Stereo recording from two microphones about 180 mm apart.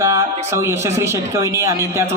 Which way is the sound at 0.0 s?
20° right (ahead or behind).